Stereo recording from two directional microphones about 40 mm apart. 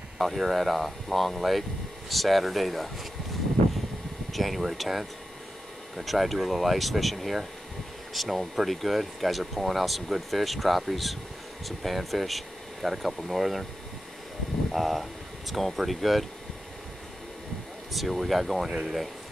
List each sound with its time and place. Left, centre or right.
0.2 s speech: centre
4.3 s speech: centre
14.7 s speech: centre
17.9 s speech: centre